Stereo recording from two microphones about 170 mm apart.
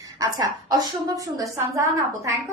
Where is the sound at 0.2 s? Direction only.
20° right (ahead or behind).